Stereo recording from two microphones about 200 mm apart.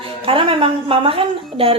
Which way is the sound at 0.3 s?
30° right (ahead or behind).